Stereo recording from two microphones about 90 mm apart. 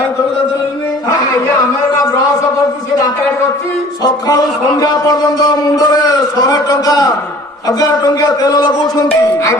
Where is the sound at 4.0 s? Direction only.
45° left (ahead or behind).